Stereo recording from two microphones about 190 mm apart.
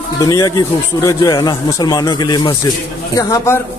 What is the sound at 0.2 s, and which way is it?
Speech, 20° left (ahead or behind).